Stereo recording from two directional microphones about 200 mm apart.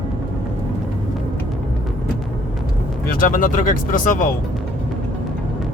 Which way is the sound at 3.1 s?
45° left (ahead or behind).